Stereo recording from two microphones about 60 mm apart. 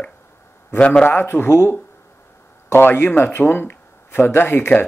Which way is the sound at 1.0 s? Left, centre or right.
Left.